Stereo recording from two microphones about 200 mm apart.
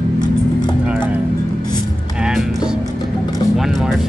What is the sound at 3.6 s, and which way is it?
Vehicle, centre (ahead or behind).